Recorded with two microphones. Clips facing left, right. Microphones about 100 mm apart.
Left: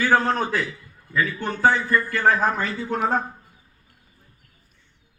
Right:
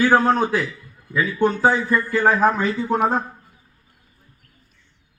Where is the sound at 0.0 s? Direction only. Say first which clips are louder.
Right 4 dB; 15° right (ahead or behind).